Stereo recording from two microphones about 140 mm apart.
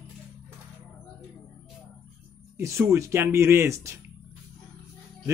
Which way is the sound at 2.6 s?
20° right (ahead or behind).